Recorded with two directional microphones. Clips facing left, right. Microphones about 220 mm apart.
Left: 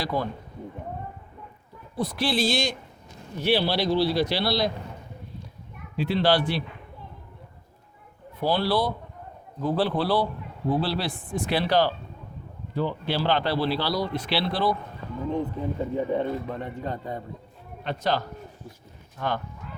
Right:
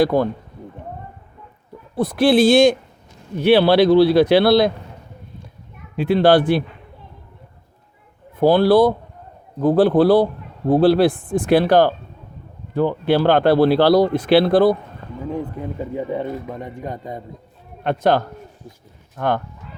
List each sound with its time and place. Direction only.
0.0 s speech: 55° right (ahead or behind)
2.0 s a man's voice: 50° right (ahead or behind)
6.0 s speech: 50° right (ahead or behind)
8.4 s speech: 50° right (ahead or behind)
16.0 s a man's voice: 10° right (ahead or behind)
17.8 s a man's voice: 55° right (ahead or behind)